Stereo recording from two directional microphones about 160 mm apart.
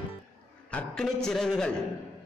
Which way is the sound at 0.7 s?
5° left (ahead or behind).